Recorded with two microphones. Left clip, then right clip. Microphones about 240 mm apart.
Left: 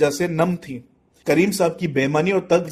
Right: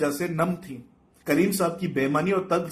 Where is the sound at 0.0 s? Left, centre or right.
Left.